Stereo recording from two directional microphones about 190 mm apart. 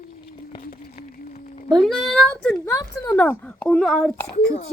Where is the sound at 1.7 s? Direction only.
Centre (ahead or behind).